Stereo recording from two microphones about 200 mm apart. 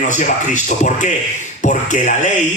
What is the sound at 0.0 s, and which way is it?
A man's voice, 40° left (ahead or behind).